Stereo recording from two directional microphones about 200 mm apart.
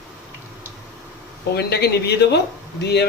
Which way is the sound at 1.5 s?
55° left (ahead or behind).